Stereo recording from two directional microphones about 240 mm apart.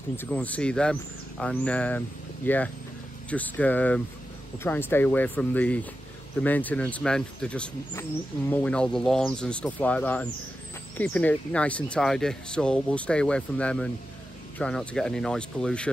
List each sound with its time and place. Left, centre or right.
0.2 s speech: centre